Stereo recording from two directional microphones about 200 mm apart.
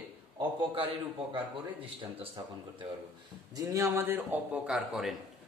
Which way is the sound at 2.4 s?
20° right (ahead or behind).